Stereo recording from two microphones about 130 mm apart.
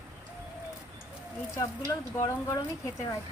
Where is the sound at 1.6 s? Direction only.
25° left (ahead or behind).